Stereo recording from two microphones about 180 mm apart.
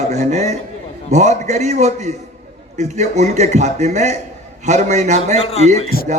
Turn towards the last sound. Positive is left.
turn(degrees=55)  # may be behind; listen again after turning